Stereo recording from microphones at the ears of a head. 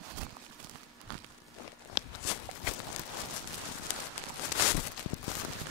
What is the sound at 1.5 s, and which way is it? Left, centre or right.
Walk, left.